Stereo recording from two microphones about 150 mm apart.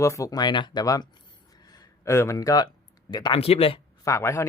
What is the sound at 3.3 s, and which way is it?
Speech, 40° left (ahead or behind).